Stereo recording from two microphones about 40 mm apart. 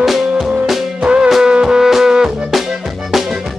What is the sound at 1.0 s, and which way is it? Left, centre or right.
Music, right.